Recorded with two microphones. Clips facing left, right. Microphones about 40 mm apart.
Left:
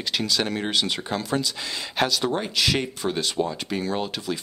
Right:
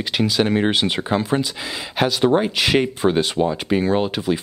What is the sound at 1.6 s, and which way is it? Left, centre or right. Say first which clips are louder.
Speech: right 3 dB; centre.